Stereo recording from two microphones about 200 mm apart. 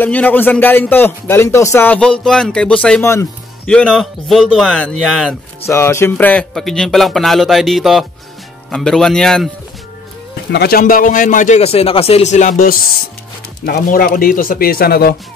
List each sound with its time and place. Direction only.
0.0 s speech: 10° left (ahead or behind)
5.7 s speech: 15° left (ahead or behind)
10.5 s a man's voice: 50° left (ahead or behind)